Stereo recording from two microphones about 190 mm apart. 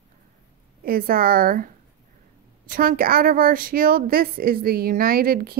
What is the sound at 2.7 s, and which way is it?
A woman's voice, 50° right (ahead or behind).